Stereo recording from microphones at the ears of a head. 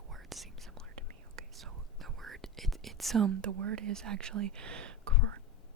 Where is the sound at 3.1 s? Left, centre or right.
Right.